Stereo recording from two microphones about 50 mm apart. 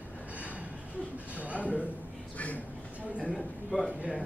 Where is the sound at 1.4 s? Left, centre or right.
Right.